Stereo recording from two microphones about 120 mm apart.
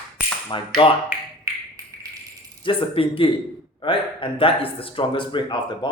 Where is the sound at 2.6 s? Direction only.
50° left (ahead or behind).